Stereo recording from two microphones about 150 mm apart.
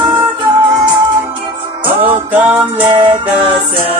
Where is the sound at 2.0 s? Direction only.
10° right (ahead or behind).